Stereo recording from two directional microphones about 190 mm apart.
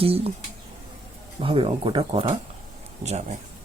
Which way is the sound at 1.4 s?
25° right (ahead or behind).